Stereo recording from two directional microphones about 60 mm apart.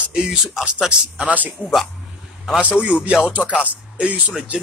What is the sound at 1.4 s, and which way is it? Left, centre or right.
Speech, right.